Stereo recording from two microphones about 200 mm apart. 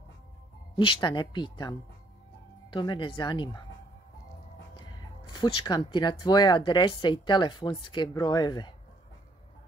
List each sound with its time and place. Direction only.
0.7 s speech: 25° left (ahead or behind)
5.3 s speech: 20° left (ahead or behind)